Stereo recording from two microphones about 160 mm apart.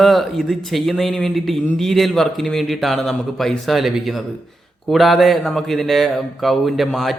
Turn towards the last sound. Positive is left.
turn(degrees=0)  # may be behind; listen again after turning